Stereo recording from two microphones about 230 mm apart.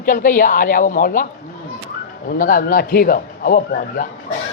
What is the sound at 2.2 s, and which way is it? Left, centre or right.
A man's voice, left.